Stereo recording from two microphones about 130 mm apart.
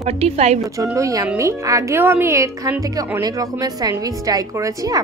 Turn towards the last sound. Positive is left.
turn(degrees=-25)  # may be behind; listen again after turning